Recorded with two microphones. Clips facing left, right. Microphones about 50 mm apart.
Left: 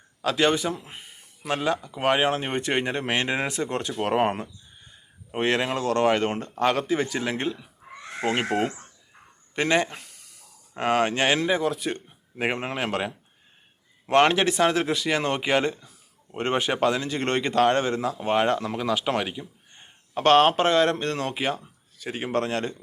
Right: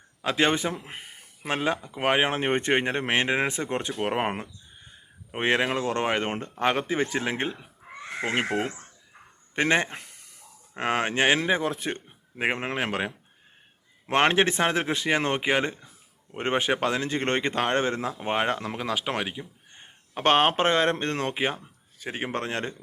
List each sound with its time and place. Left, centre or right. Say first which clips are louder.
0.2 s a man's voice: left 1 dB; right
1.4 s speech: left 1 dB; right
3.9 s speech: left 6 dB; centre; by 7.7 s right
9.6 s speech: left 1 dB; right
10.8 s speech: left 2 dB; centre
12.4 s speech: even; centre
14.1 s speech: left 2 dB; right